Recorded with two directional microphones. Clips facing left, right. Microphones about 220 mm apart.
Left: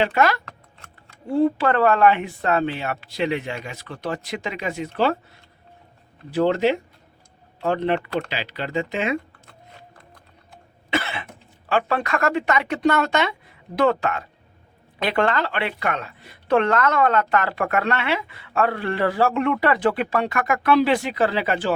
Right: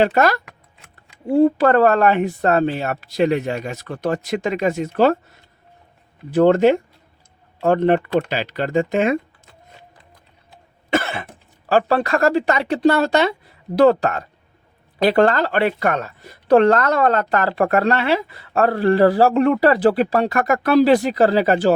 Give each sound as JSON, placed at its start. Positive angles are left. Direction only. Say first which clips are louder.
{"t": 0.0, "sound": "speech", "louder": "right 4 dB", "side_deg": -40}
{"t": 6.3, "sound": "speech", "louder": "right 6 dB", "side_deg": -50}
{"t": 10.9, "sound": "cough", "louder": "right 5 dB", "side_deg": -45}
{"t": 11.3, "sound": "a woman's voice", "louder": "right 7 dB", "side_deg": -35}